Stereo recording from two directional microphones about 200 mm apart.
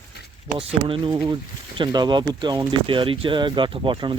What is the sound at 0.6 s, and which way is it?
Speech, 25° right (ahead or behind).